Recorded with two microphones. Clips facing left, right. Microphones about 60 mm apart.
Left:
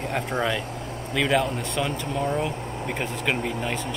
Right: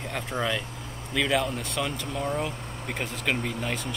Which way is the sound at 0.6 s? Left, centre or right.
Left.